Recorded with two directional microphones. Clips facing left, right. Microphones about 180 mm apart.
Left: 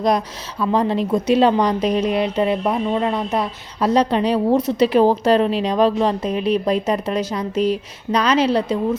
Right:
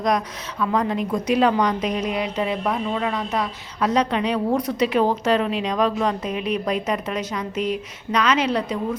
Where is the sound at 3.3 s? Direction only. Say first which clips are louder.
Left 3 dB; 30° left (ahead or behind).